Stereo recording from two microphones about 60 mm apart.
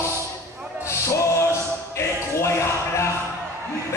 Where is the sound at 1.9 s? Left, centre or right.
Left.